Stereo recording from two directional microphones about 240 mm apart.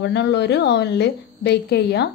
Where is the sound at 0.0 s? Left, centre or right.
Left.